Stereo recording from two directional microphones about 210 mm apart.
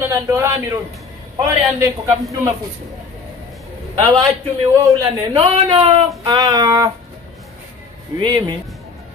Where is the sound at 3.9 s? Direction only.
15° right (ahead or behind).